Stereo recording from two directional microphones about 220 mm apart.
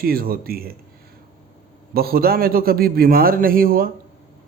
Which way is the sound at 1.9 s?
45° right (ahead or behind).